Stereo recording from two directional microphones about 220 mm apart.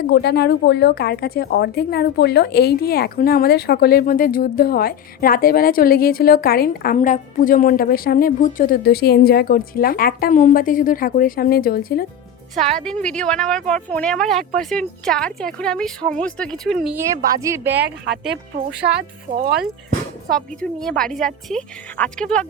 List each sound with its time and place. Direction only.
0.1 s a woman's voice: 50° left (ahead or behind)
12.5 s speech: centre (ahead or behind)
17.4 s speech: 10° right (ahead or behind)
20.3 s speech: 5° left (ahead or behind)